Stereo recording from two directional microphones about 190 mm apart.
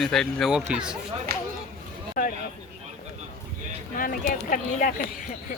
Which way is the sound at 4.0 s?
45° left (ahead or behind).